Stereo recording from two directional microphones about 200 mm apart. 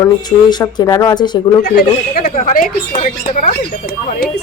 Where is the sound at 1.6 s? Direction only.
50° left (ahead or behind).